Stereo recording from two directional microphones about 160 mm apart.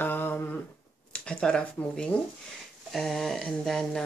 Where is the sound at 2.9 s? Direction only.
Centre (ahead or behind).